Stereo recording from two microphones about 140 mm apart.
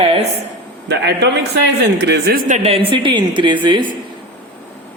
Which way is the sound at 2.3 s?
90° right.